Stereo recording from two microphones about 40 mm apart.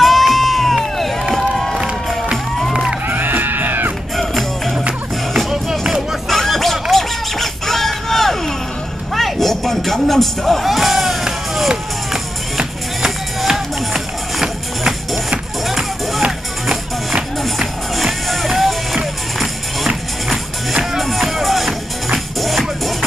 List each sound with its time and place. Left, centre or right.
0.0 s crowd: centre
1.3 s music: centre
2.7 s music: centre
3.1 s music: right
4.2 s music: centre
5.5 s music: centre
6.2 s music: centre
17.4 s music: centre
21.0 s music: centre